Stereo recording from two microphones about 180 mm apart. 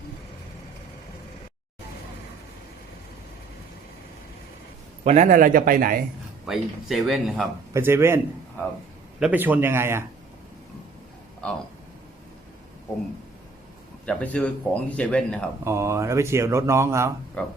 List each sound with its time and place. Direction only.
5.0 s speech: 40° right (ahead or behind)
6.4 s speech: centre (ahead or behind)
7.7 s speech: 15° right (ahead or behind)
9.2 s speech: 10° right (ahead or behind)
11.4 s speech: 5° left (ahead or behind)
14.0 s speech: 5° left (ahead or behind)
15.6 s speech: 15° right (ahead or behind)
17.4 s speech: 5° left (ahead or behind)